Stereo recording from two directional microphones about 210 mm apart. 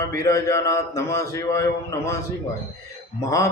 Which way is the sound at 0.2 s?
15° left (ahead or behind).